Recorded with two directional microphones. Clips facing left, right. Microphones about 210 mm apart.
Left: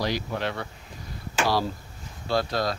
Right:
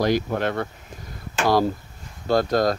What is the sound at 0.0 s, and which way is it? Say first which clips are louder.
Speech: right 7 dB; 50° right (ahead or behind).